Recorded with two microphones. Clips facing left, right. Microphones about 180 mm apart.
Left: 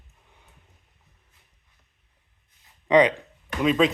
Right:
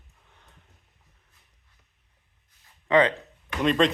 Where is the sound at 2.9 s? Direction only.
15° left (ahead or behind).